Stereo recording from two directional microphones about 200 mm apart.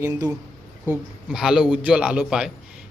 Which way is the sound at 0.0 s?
15° right (ahead or behind).